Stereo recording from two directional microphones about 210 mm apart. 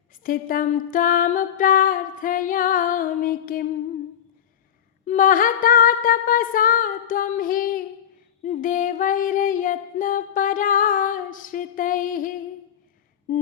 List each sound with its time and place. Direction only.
0.2 s music: 40° left (ahead or behind)
5.0 s music: 40° left (ahead or behind)
13.3 s a sound: 35° left (ahead or behind)